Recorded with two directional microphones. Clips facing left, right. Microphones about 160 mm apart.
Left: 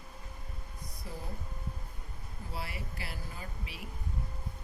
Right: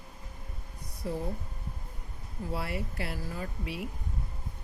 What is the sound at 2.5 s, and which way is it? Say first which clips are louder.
Speech: right 6 dB; 60° right (ahead or behind).